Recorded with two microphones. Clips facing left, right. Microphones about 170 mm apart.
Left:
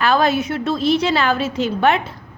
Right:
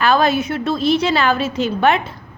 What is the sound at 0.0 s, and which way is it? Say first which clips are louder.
A woman's voice: right 1 dB; 70° right (ahead or behind).